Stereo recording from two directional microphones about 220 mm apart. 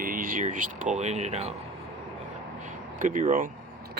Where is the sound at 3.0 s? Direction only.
35° right (ahead or behind).